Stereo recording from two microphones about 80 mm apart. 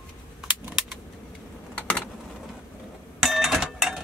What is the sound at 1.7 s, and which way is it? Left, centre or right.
Typing, centre.